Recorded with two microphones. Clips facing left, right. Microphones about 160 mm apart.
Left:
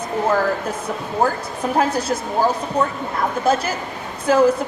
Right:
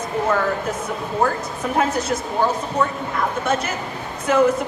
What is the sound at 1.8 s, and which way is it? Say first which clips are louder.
Speech: left 1 dB; 30° left (ahead or behind).